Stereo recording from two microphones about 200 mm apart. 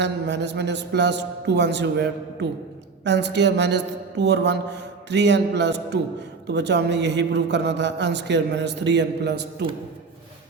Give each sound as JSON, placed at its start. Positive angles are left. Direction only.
{"t": 0.0, "sound": "a man's voice", "side_deg": -60}